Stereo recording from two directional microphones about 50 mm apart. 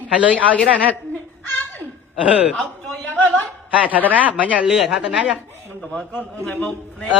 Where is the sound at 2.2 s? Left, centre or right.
Right.